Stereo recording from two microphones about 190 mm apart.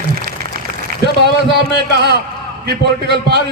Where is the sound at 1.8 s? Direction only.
60° right (ahead or behind).